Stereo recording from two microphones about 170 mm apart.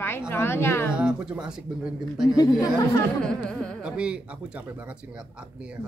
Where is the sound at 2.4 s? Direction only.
20° left (ahead or behind).